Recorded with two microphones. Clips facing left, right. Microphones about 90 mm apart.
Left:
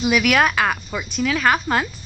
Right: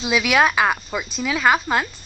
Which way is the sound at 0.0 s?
15° right (ahead or behind).